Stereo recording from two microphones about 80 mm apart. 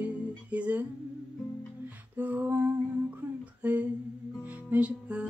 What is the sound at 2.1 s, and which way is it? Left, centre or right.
Female singing, right.